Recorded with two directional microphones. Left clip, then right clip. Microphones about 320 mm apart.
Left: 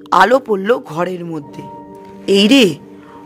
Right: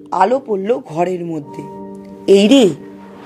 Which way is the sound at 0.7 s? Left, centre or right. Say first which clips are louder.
Right 1 dB; centre.